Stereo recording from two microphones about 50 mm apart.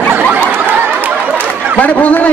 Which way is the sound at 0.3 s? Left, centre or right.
Right.